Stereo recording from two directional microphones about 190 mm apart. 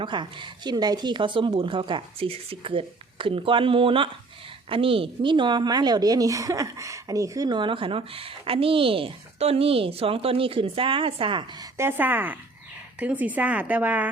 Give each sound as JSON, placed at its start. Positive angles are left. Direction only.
{"t": 0.0, "sound": "a woman's voice", "side_deg": -25}